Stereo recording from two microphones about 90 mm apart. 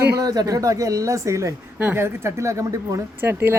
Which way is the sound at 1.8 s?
20° right (ahead or behind).